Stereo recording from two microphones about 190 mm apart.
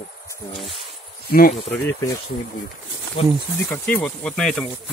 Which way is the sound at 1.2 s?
50° left (ahead or behind).